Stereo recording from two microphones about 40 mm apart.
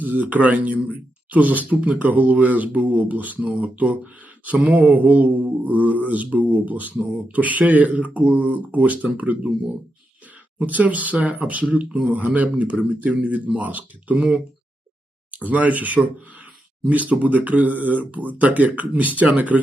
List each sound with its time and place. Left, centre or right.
0.0 s speech: right
10.6 s speech: right
15.3 s speech: right